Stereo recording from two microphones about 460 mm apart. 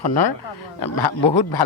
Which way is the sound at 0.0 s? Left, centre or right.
Left.